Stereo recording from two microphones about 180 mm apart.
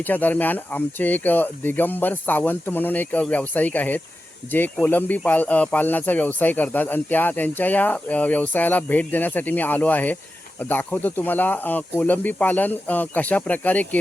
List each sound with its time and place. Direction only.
0.0 s speech: 10° left (ahead or behind)